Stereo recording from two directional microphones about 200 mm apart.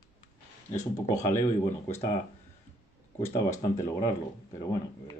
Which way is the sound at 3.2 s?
15° left (ahead or behind).